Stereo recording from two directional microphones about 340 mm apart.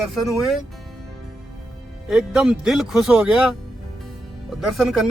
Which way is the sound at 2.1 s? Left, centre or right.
Centre.